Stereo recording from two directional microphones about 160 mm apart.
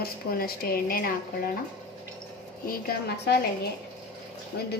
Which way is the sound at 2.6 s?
90° left.